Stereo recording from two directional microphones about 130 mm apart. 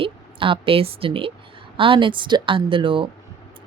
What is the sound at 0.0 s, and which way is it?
A woman's voice, 40° right (ahead or behind).